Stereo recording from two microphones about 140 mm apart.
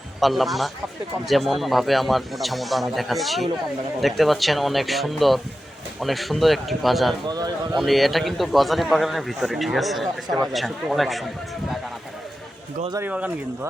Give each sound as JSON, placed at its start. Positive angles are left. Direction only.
{"t": 0.2, "sound": "a man's voice", "side_deg": 0}
{"t": 7.3, "sound": "speech", "side_deg": -30}
{"t": 7.8, "sound": "a man's voice", "side_deg": 0}
{"t": 13.1, "sound": "speech", "side_deg": -10}